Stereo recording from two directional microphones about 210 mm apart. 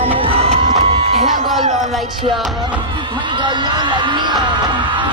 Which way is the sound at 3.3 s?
20° right (ahead or behind).